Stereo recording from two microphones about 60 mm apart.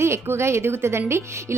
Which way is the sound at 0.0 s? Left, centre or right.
Right.